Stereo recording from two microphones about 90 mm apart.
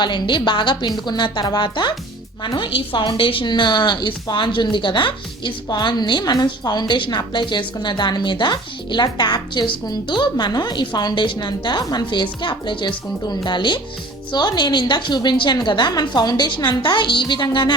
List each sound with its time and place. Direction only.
0.0 s a woman's voice: 60° left (ahead or behind)
2.4 s a woman's voice: 70° left (ahead or behind)
3.4 s a woman's voice: 55° left (ahead or behind)
12.2 s a woman's voice: 60° left (ahead or behind)